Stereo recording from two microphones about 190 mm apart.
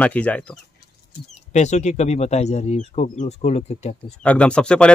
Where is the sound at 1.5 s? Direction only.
35° left (ahead or behind).